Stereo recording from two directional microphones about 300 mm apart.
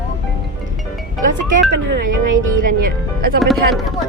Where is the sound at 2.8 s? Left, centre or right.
Right.